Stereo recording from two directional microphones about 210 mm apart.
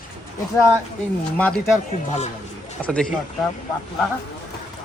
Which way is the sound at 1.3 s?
5° left (ahead or behind).